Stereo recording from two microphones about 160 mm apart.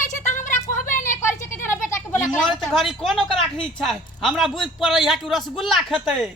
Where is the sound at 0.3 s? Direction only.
50° left (ahead or behind).